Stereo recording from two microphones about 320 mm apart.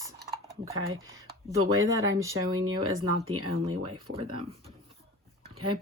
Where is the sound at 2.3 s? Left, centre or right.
Right.